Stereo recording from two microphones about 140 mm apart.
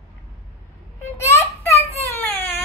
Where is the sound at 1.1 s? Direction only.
20° left (ahead or behind).